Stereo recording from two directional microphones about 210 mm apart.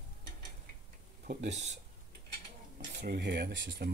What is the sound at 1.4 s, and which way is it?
Speech, 35° right (ahead or behind).